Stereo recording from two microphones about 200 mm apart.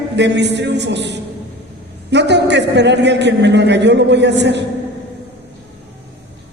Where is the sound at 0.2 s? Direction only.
60° right (ahead or behind).